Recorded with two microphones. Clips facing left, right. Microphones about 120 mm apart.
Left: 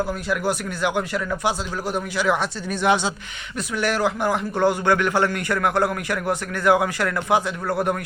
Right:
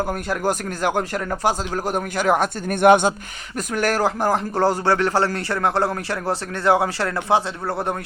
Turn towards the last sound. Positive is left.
turn(degrees=-25)  # may be behind; listen again after turning